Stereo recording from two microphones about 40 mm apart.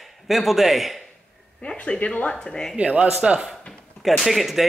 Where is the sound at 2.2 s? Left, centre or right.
Left.